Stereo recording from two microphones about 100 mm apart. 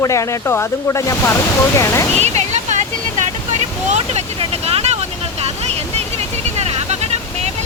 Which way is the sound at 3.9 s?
90° right.